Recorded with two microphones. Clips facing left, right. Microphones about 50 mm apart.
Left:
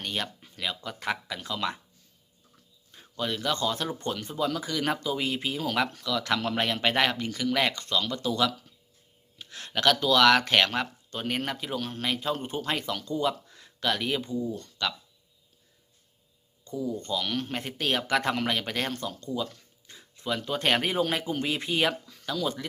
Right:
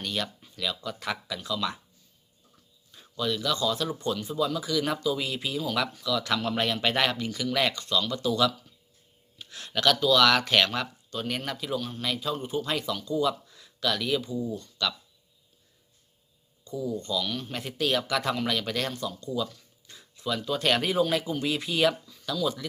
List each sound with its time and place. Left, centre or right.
0.0 s speech: left
1.4 s a man's voice: left
2.9 s speech: left
6.8 s speech: left
11.8 s a man's voice: left
14.5 s speech: left
16.6 s speech: left
17.5 s speech: left
22.0 s a sound: left
22.4 s speech: left